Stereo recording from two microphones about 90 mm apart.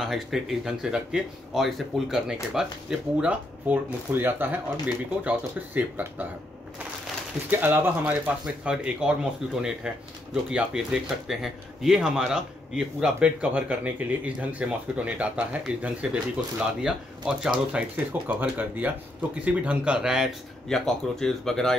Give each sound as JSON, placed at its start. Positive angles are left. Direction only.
{"t": 0.0, "sound": "speech", "side_deg": 0}
{"t": 7.4, "sound": "speech", "side_deg": -20}
{"t": 8.6, "sound": "speech", "side_deg": -10}
{"t": 20.6, "sound": "speech", "side_deg": 5}